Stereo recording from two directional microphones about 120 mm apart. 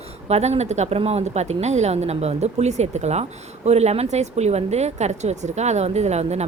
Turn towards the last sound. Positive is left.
turn(degrees=-65)  # may be behind; listen again after turning